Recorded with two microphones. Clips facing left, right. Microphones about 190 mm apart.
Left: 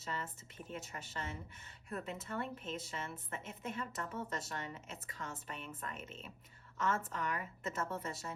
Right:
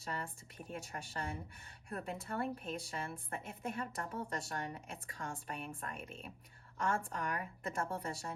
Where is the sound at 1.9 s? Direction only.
30° right (ahead or behind).